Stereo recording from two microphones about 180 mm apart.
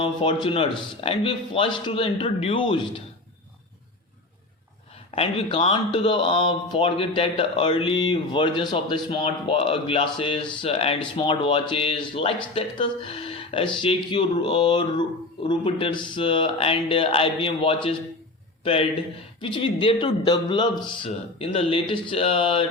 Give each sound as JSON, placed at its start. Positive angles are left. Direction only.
{"t": 0.0, "sound": "speech", "side_deg": 30}
{"t": 5.1, "sound": "a man's voice", "side_deg": 30}